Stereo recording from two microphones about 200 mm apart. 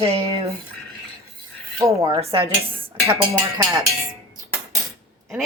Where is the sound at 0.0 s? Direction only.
30° right (ahead or behind).